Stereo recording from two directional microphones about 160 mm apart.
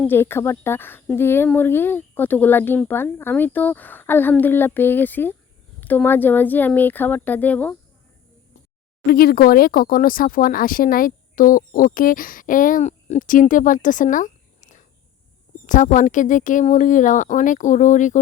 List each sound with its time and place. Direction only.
0.1 s speech: 15° left (ahead or behind)
9.0 s speech: 70° left (ahead or behind); by 18.2 s 50° left (ahead or behind)